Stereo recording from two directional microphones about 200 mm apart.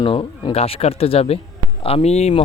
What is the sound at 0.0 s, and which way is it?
Speech, 25° left (ahead or behind).